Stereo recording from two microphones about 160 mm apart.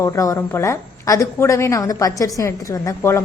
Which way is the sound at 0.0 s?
20° left (ahead or behind).